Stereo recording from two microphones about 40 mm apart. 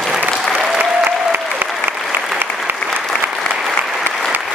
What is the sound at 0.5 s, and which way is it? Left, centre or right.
Applause, centre.